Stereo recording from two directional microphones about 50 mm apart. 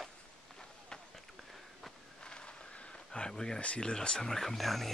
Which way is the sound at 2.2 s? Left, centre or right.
Centre.